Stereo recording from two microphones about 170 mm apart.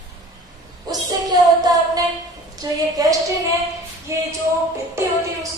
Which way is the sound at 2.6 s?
20° right (ahead or behind).